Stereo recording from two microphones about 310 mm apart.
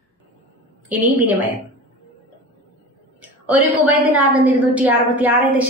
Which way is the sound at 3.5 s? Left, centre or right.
Centre.